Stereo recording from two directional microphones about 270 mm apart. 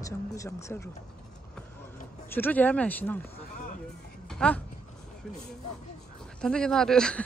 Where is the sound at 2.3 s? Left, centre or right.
Centre.